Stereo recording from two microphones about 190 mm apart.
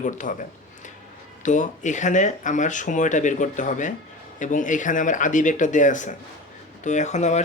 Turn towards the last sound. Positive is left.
turn(degrees=35)  # may be behind; listen again after turning